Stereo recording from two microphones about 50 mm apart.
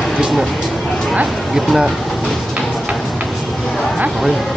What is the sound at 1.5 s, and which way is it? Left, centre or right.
Speech, centre.